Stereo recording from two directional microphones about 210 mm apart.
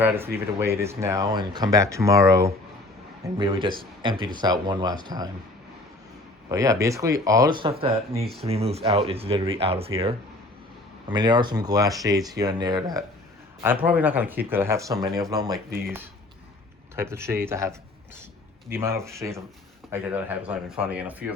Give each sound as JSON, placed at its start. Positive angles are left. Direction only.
{"t": 0.3, "sound": "speech", "side_deg": -10}
{"t": 6.5, "sound": "speech", "side_deg": -15}